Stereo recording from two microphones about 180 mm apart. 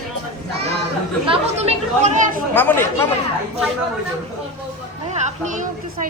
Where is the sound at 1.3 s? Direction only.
40° right (ahead or behind).